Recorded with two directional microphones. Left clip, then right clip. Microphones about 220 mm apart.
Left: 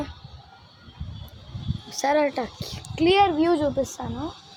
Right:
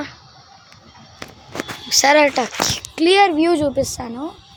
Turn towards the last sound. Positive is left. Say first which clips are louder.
# right 6 dB
turn(degrees=-20)  # may be behind; listen again after turning